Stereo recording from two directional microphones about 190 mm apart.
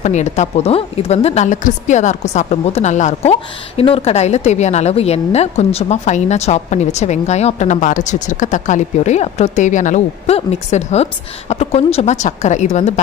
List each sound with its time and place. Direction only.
0.0 s a woman's voice: 35° left (ahead or behind)